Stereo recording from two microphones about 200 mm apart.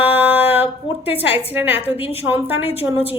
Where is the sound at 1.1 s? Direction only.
30° left (ahead or behind).